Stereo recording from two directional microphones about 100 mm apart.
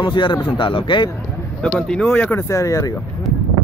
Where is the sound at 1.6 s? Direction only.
10° left (ahead or behind).